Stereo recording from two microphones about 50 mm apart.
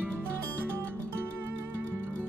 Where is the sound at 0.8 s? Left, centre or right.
Right.